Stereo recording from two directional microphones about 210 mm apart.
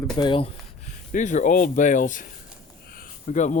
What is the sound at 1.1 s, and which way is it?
Speech, 35° left (ahead or behind).